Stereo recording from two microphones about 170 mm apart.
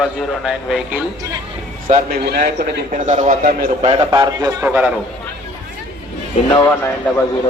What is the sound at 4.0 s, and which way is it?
Speech, 20° right (ahead or behind).